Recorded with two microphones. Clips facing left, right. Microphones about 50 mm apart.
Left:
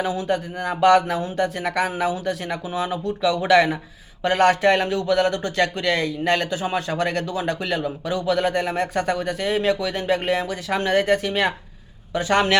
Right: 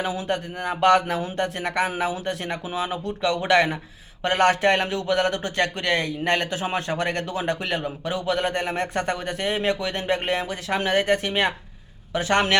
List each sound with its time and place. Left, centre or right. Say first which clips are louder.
0.0 s speech: left 3 dB; centre; by 5.4 s right
5.4 s speech: left 3 dB; centre
6.5 s speech: left 2 dB; centre
9.4 s speech: left 1 dB; right